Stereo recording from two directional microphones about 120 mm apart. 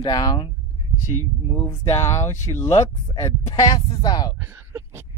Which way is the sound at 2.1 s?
25° left (ahead or behind).